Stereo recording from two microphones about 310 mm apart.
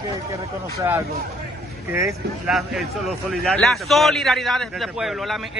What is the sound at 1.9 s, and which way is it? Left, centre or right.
Speech, centre.